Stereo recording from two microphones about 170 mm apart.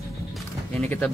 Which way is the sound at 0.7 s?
10° left (ahead or behind).